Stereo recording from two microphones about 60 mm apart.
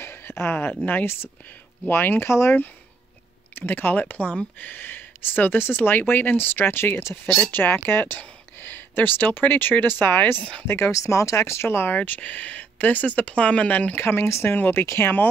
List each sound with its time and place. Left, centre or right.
0.0 s a sound: left
1.9 s speech: left
3.5 s speech: left
7.2 s speech: centre
7.5 s speech: left
10.9 s speech: left
12.0 s speech: left